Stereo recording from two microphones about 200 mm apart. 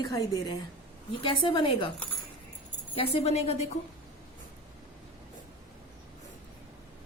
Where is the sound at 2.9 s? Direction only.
30° left (ahead or behind).